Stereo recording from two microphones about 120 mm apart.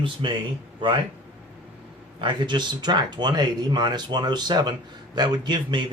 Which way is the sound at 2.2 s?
40° right (ahead or behind).